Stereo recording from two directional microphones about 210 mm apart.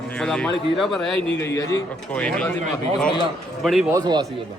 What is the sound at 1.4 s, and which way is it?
A man's voice, 15° left (ahead or behind).